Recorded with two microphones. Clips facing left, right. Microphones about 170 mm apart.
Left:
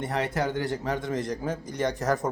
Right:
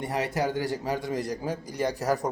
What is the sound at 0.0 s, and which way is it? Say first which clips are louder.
A man's voice: even; 10° right (ahead or behind).